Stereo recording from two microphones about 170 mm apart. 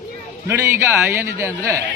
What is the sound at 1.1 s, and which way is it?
Speech, 15° right (ahead or behind).